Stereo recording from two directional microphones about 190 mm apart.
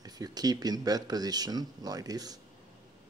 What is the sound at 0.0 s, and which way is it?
Speech, 20° right (ahead or behind).